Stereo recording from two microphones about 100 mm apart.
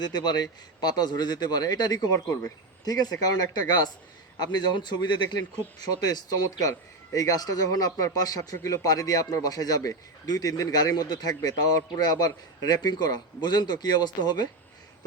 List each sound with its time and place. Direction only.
0.0 s speech: 45° left (ahead or behind)